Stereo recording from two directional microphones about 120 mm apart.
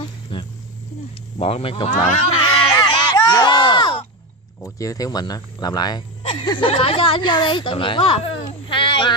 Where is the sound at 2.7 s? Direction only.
30° left (ahead or behind).